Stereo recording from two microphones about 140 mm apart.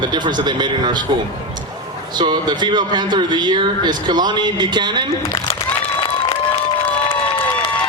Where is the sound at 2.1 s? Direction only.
30° right (ahead or behind).